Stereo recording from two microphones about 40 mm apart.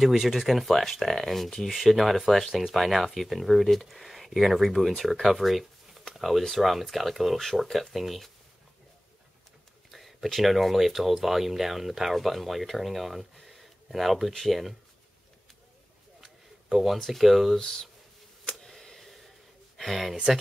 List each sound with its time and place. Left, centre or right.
0.2 s speech: centre
9.8 s speech: centre
16.6 s speech: centre
17.6 s speech: centre
18.5 s a sound: centre
19.8 s speech: centre